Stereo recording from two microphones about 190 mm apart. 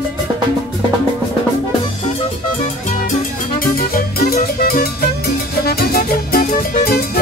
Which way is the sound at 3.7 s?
50° left (ahead or behind).